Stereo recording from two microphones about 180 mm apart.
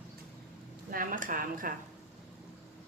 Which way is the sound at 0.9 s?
50° right (ahead or behind).